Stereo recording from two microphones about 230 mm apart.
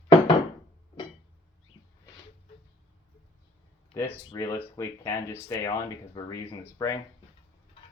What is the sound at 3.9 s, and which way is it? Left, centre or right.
Speech, centre.